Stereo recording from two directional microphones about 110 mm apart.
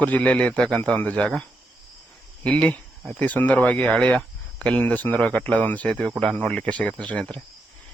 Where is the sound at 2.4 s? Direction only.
10° left (ahead or behind).